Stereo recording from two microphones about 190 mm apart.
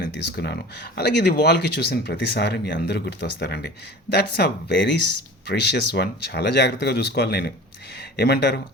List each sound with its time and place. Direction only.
0.0 s speech: 55° left (ahead or behind)